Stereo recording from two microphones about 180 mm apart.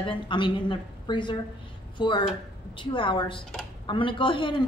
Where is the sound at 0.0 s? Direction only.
25° left (ahead or behind).